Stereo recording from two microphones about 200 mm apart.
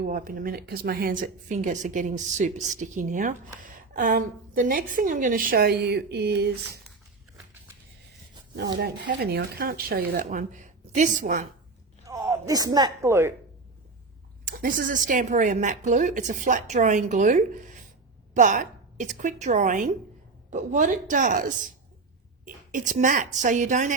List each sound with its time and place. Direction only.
0.0 s a woman's voice: 45° right (ahead or behind)
8.8 s a woman's voice: 55° right (ahead or behind)
12.0 s speech: 15° right (ahead or behind)
14.4 s a woman's voice: 40° right (ahead or behind)